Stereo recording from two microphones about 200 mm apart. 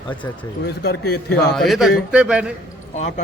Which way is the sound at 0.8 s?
50° left (ahead or behind).